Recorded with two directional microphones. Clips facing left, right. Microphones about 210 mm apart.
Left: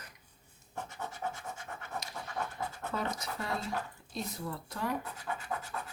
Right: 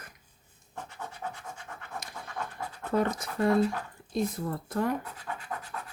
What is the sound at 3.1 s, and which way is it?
Speech, 50° right (ahead or behind).